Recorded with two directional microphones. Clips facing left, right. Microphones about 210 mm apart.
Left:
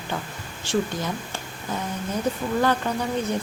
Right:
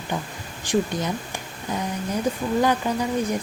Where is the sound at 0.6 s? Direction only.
15° right (ahead or behind).